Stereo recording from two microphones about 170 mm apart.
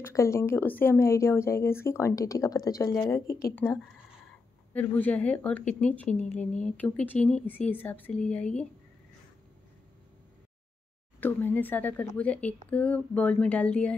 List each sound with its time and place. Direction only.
0.0 s speech: 15° left (ahead or behind)
3.3 s speech: 60° left (ahead or behind)
3.5 s speech: 15° left (ahead or behind)
11.1 s speech: 10° left (ahead or behind)